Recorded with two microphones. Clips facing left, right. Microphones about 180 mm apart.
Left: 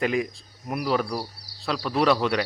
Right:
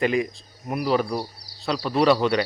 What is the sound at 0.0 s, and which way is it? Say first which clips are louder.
A man's voice: right 2 dB; centre (ahead or behind).